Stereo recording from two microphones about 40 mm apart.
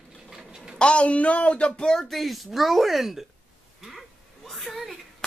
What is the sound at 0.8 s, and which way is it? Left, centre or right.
Speech, left.